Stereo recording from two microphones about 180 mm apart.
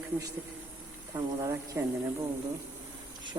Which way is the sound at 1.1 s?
20° right (ahead or behind).